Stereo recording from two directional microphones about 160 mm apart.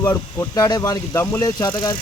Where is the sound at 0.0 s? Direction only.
15° left (ahead or behind).